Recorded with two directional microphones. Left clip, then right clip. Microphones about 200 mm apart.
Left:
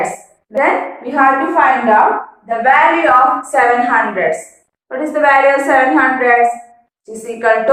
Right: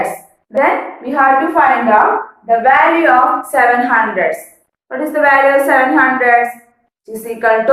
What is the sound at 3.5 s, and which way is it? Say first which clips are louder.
A woman's voice: even; 15° right (ahead or behind).